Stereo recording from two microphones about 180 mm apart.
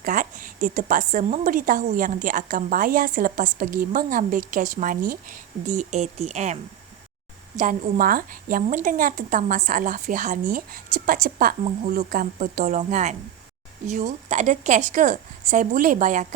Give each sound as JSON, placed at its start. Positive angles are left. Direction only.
{"t": 0.0, "sound": "a woman's voice", "side_deg": -50}